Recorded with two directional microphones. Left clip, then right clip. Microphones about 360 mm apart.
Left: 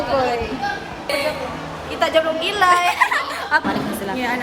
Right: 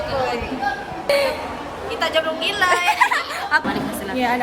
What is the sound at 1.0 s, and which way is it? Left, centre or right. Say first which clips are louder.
Speech: right 3 dB; right.